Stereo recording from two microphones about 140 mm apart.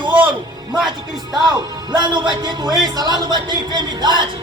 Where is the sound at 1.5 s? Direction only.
30° right (ahead or behind).